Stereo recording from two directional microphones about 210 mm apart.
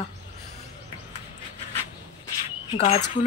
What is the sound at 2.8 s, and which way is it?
Speech, 30° left (ahead or behind).